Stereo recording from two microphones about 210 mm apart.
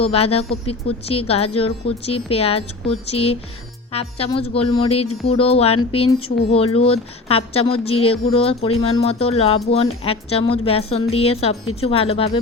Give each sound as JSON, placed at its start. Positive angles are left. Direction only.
{"t": 0.0, "sound": "speech", "side_deg": 30}
{"t": 9.8, "sound": "speech", "side_deg": 90}
{"t": 10.1, "sound": "speech", "side_deg": 25}